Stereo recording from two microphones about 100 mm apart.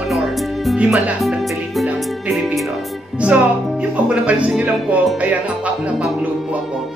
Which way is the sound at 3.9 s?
10° right (ahead or behind).